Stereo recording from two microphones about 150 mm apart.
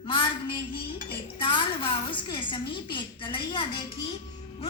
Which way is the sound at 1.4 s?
30° left (ahead or behind).